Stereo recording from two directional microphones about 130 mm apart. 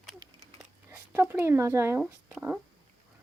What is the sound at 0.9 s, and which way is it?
Speech, 20° right (ahead or behind).